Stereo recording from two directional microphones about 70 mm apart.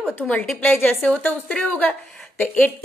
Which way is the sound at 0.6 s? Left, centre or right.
Left.